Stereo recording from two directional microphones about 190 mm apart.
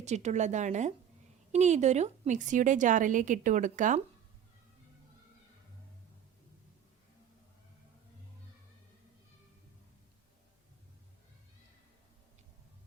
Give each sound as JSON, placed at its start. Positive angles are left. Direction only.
{"t": 0.0, "sound": "a woman's voice", "side_deg": -35}